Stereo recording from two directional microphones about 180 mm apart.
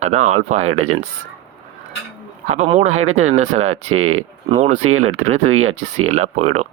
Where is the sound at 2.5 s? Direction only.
40° right (ahead or behind).